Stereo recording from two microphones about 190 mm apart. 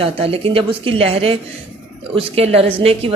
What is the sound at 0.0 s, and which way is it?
A woman's voice, 30° right (ahead or behind).